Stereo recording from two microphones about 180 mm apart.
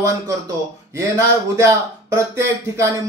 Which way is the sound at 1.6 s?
15° right (ahead or behind).